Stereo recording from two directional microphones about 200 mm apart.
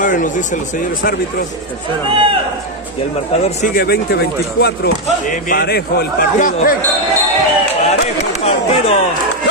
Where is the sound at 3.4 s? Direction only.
40° left (ahead or behind).